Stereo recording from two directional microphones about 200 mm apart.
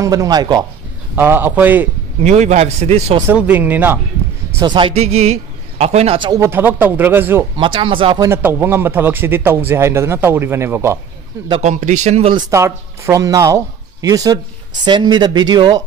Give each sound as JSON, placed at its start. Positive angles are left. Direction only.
{"t": 0.0, "sound": "a man's voice", "side_deg": -15}
{"t": 2.2, "sound": "a man's voice", "side_deg": -35}
{"t": 3.2, "sound": "a man's voice", "side_deg": -10}
{"t": 4.6, "sound": "a man's voice", "side_deg": -25}
{"t": 7.5, "sound": "a man's voice", "side_deg": -25}
{"t": 8.3, "sound": "a man's voice", "side_deg": -10}
{"t": 11.6, "sound": "a man's voice", "side_deg": -35}
{"t": 12.4, "sound": "a man's voice", "side_deg": -15}